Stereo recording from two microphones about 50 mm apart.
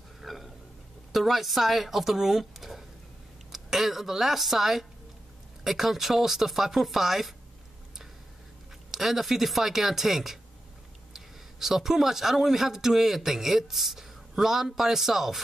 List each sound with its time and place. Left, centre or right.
0.2 s a sound: centre
1.1 s speech: centre
8.9 s a man's voice: centre